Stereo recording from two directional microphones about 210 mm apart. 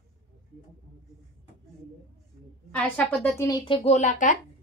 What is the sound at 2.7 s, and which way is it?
A woman's voice, 5° left (ahead or behind).